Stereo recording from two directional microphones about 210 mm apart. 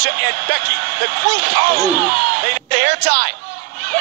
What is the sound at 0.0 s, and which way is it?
Speech, 50° right (ahead or behind).